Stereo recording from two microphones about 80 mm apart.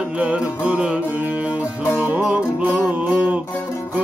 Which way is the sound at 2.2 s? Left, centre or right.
Centre.